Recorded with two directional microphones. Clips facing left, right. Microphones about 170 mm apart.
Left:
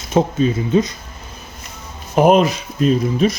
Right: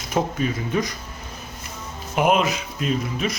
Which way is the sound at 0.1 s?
25° left (ahead or behind).